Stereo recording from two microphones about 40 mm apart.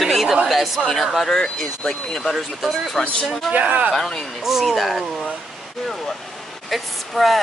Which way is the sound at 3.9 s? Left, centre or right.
Centre.